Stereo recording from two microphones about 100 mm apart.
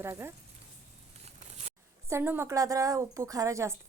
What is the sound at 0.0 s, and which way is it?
Speech, 25° right (ahead or behind).